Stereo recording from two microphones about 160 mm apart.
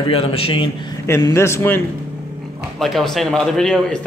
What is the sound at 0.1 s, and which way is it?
Speech, 35° left (ahead or behind).